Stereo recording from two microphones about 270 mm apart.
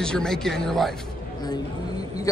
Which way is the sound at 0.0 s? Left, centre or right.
Centre.